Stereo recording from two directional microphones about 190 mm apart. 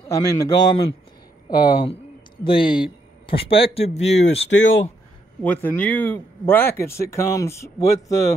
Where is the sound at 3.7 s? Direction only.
35° left (ahead or behind).